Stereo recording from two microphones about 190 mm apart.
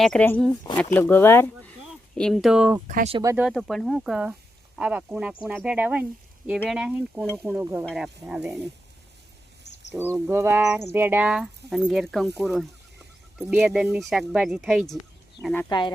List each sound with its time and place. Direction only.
0.0 s speech: 5° left (ahead or behind)
2.8 s speech: 40° right (ahead or behind)
3.2 s speech: 15° right (ahead or behind)
3.5 s speech: centre (ahead or behind)
9.7 s a sound: 65° left (ahead or behind)
10.2 s speech: 15° right (ahead or behind)
15.4 s speech: 15° right (ahead or behind)